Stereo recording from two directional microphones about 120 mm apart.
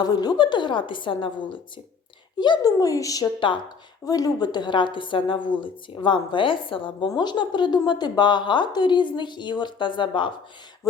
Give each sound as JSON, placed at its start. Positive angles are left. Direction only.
{"t": 0.0, "sound": "a woman's voice", "side_deg": 35}